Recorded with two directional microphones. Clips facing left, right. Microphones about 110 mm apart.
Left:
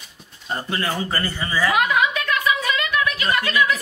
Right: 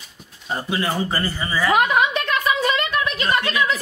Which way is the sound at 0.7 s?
10° right (ahead or behind).